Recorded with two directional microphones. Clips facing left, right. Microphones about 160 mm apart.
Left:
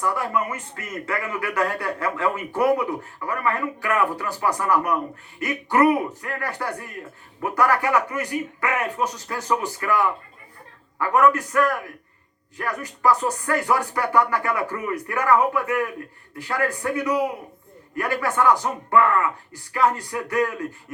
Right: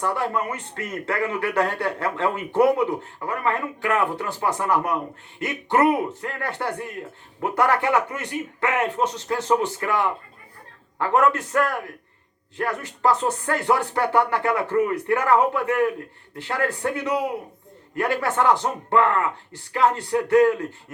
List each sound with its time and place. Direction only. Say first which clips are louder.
0.0 s a man's voice: even; 30° right (ahead or behind)